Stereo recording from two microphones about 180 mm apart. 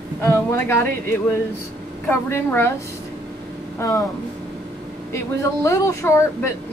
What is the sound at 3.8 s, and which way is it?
Speech, 20° left (ahead or behind).